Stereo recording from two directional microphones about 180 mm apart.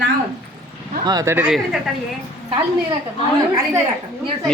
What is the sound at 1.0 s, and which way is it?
Speech, 20° right (ahead or behind).